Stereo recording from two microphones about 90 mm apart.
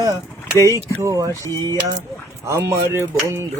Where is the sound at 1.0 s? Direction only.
45° right (ahead or behind).